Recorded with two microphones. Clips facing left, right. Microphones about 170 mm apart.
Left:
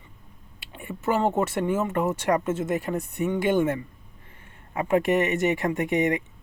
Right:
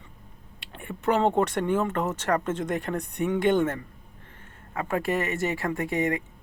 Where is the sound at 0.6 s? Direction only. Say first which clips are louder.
Right 1 dB; 5° left (ahead or behind).